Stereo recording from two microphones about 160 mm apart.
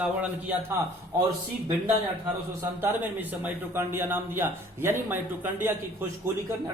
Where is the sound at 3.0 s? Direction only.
10° right (ahead or behind).